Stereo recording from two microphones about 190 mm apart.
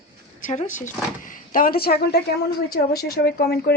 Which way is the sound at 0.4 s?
40° left (ahead or behind).